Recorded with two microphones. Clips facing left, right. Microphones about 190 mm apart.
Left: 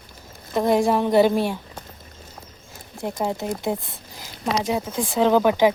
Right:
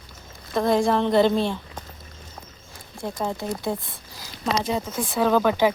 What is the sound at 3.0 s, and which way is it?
Speech, 15° left (ahead or behind).